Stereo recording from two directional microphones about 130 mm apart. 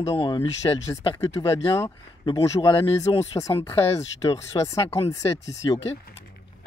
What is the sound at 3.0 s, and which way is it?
Speech, 55° left (ahead or behind).